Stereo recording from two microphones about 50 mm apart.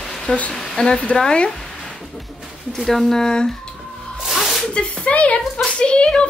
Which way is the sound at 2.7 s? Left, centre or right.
Centre.